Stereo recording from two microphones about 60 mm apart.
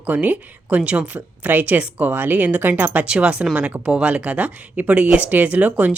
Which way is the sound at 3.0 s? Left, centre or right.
Centre.